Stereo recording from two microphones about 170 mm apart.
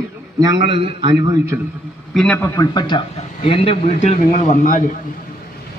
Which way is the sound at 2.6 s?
25° left (ahead or behind).